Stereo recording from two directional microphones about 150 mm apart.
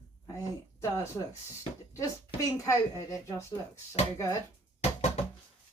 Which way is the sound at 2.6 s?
20° left (ahead or behind).